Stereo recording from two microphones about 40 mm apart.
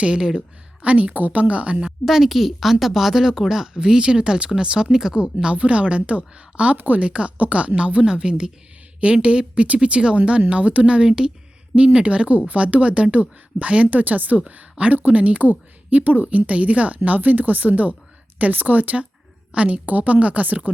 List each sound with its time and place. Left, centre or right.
0.0 s speech: centre
0.8 s speech: right
2.0 s speech: centre
3.8 s speech: right
6.7 s a woman's voice: right
7.0 s speech: right
13.8 s a woman's voice: right
14.4 s speech: right
19.5 s speech: right